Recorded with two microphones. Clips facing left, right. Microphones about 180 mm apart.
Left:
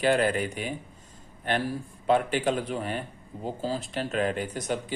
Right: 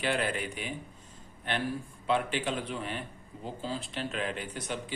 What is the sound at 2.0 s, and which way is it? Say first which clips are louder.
Speech: left 6 dB; 45° left (ahead or behind).